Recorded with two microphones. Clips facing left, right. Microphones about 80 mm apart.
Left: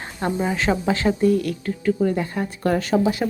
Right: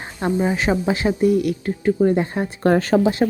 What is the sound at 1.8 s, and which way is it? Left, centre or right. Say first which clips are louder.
Speech: right 4 dB; right.